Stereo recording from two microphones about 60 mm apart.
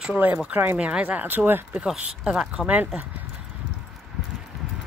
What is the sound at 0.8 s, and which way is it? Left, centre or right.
Speech, right.